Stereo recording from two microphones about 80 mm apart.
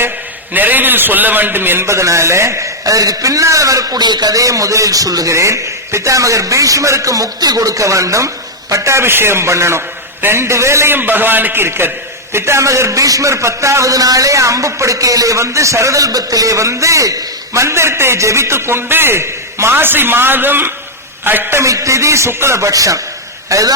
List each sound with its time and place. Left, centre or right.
0.5 s a man's voice: right
21.6 s a man's voice: right